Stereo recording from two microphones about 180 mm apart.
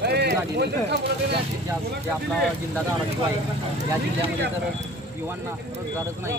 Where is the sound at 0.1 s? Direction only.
65° right (ahead or behind).